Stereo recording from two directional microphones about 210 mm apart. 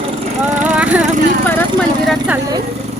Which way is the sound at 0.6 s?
5° right (ahead or behind).